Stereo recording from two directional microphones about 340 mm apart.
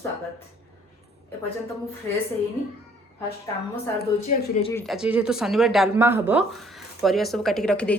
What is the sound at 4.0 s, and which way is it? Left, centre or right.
Speech, centre.